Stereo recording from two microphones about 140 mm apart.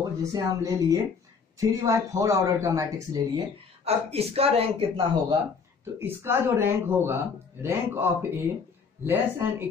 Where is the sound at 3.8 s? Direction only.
45° right (ahead or behind).